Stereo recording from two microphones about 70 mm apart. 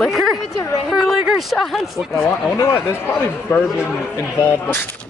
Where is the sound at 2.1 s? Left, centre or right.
Left.